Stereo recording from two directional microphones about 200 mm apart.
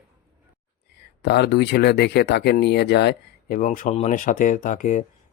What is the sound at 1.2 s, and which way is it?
Speech, 55° left (ahead or behind).